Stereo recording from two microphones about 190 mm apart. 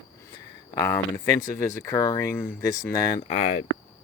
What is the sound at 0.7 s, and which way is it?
Speech, 15° left (ahead or behind).